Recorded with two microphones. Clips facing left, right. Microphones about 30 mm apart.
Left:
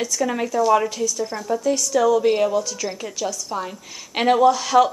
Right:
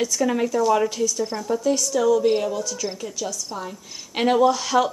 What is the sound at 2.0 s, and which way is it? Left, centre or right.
Speech, centre.